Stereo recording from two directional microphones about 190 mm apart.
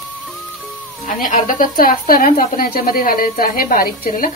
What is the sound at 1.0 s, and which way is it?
A woman's voice, 45° left (ahead or behind).